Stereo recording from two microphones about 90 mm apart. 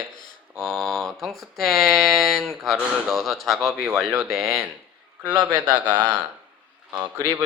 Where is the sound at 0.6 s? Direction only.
Centre (ahead or behind).